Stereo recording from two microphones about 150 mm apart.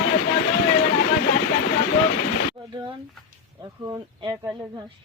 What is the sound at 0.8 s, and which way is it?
Vehicle, 65° left (ahead or behind).